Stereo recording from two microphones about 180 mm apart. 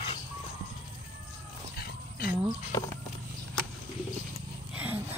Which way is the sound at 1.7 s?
60° left (ahead or behind).